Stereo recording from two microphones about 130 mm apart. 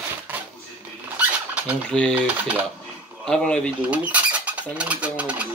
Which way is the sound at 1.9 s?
5° left (ahead or behind).